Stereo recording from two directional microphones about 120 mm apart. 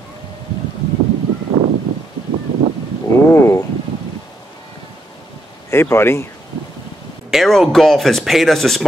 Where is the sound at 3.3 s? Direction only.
25° left (ahead or behind).